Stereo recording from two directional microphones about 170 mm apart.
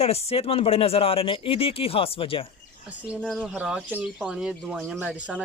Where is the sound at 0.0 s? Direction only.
35° left (ahead or behind).